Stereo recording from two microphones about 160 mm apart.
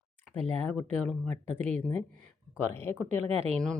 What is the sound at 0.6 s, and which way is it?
Speech, 10° left (ahead or behind).